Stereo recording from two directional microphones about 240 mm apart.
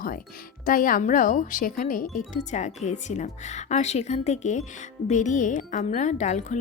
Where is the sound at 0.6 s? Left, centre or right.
Left.